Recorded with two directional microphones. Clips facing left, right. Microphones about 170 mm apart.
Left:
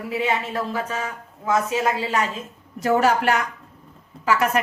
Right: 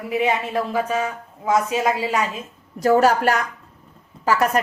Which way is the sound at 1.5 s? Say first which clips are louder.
Right 2 dB; 15° right (ahead or behind).